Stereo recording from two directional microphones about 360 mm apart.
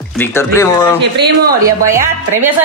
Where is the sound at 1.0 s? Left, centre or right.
Right.